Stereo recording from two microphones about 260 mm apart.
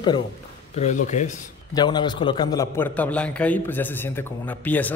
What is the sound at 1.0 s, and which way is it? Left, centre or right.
Speech, left.